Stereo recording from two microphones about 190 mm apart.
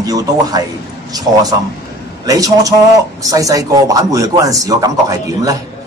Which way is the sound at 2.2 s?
20° right (ahead or behind).